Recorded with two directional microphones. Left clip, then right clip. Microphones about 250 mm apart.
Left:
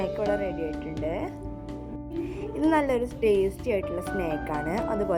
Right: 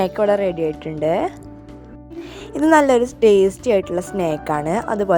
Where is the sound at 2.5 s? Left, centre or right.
Right.